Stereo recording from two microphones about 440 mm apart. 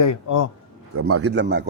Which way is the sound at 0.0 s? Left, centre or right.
Left.